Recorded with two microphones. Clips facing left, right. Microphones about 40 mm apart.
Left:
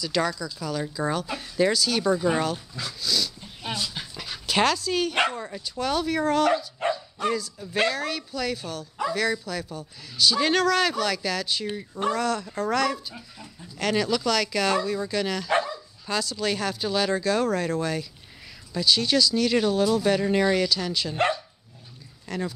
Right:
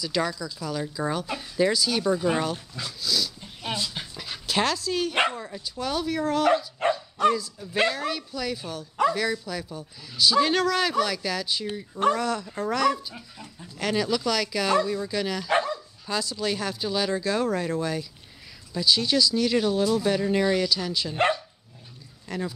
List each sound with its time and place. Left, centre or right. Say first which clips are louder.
0.0 s speech: left 1 dB; centre
2.8 s dog: even; centre
5.3 s speech: left 2 dB; centre
6.8 s bow-wow: right 2 dB; right
7.8 s speech: even; centre
10.3 s speech: even; centre
11.6 s speech: left 1 dB; centre
12.0 s speech: right 2 dB; centre
22.3 s speech: left 1 dB; centre